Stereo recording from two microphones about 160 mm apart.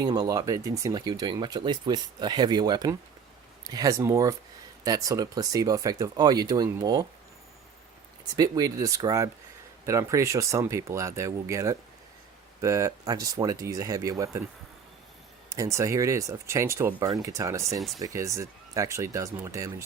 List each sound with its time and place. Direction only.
0.0 s speech: 25° right (ahead or behind)
8.3 s speech: 25° right (ahead or behind)
15.4 s speech: 20° right (ahead or behind)
17.7 s speech: centre (ahead or behind)
18.0 s speech: 20° right (ahead or behind)